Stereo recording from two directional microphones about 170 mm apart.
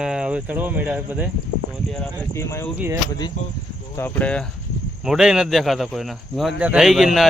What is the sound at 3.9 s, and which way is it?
Speech, 10° left (ahead or behind).